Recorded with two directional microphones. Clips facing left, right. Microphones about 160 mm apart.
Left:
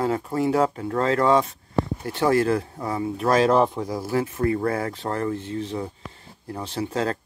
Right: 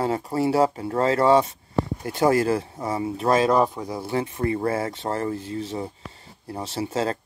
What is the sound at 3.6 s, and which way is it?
Speech, centre (ahead or behind).